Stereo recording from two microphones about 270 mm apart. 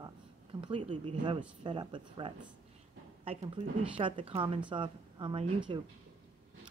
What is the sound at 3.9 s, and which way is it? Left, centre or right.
A woman's voice, centre.